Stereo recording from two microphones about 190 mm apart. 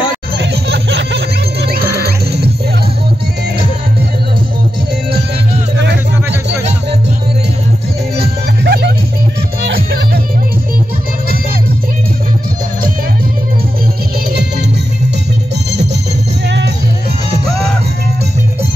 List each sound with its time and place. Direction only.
0.4 s music: 65° right (ahead or behind)
8.2 s music: 55° right (ahead or behind)
16.4 s music: 65° right (ahead or behind)